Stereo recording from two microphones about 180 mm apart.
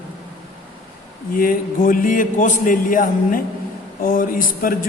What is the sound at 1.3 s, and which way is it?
A man's voice, 50° left (ahead or behind).